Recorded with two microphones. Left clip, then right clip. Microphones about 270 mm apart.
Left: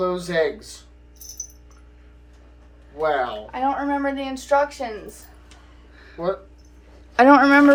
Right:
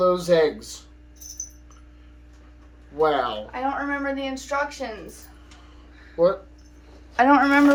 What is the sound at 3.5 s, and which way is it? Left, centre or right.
Speech, left.